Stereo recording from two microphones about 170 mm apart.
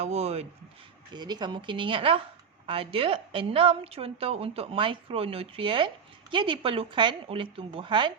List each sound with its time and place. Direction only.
0.0 s a woman's voice: 40° right (ahead or behind)
1.1 s a woman's voice: 25° right (ahead or behind)